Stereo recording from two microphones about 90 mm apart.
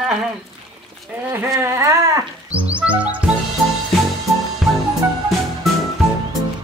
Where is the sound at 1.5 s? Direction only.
35° right (ahead or behind).